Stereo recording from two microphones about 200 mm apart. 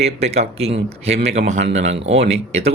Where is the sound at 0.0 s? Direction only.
30° right (ahead or behind).